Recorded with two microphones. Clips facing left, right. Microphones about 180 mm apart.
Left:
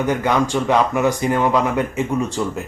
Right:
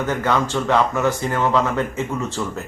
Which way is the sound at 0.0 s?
15° left (ahead or behind).